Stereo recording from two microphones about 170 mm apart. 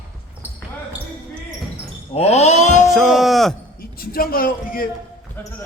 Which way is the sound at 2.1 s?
40° left (ahead or behind).